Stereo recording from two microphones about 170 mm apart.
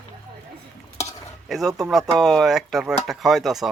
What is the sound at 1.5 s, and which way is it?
Speech, centre (ahead or behind).